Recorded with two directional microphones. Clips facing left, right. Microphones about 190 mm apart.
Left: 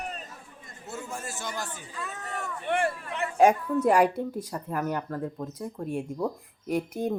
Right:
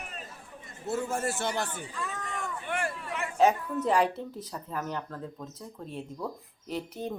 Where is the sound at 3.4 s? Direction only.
10° left (ahead or behind).